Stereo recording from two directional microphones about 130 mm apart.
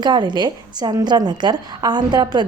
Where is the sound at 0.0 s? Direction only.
35° right (ahead or behind).